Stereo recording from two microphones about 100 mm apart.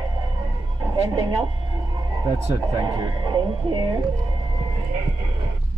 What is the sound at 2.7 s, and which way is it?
Speech, 45° right (ahead or behind).